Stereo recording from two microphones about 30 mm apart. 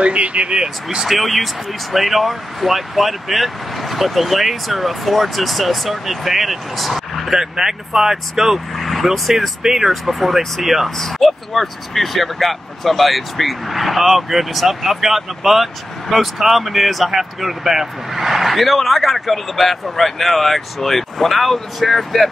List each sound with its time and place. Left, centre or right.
0.0 s speech: right
1.0 s speech: centre
7.3 s speech: centre
8.7 s speech: centre
9.6 s speech: centre
11.0 s speech: centre